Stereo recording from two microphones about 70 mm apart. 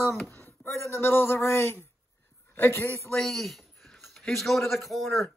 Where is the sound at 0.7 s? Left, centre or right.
Left.